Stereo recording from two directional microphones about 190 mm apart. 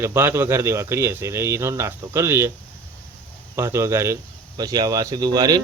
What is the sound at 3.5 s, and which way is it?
Speech, 15° right (ahead or behind).